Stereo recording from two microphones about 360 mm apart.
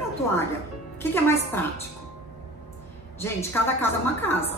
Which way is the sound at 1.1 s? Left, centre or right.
Centre.